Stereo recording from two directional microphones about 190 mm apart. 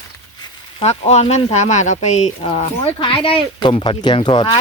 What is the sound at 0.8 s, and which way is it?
Speech, 35° left (ahead or behind).